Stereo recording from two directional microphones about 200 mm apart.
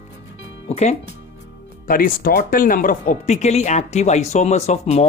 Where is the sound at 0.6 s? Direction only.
35° left (ahead or behind).